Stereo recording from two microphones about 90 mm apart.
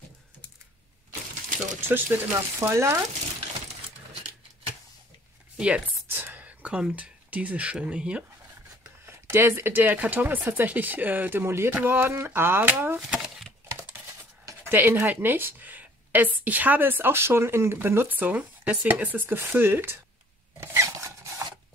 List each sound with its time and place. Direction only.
1.9 s speech: 25° right (ahead or behind)
5.6 s speech: 15° right (ahead or behind)
9.0 s speech: 25° right (ahead or behind)
13.0 s a sound: 5° right (ahead or behind)
14.7 s speech: 20° right (ahead or behind)
20.6 s filing: 35° right (ahead or behind)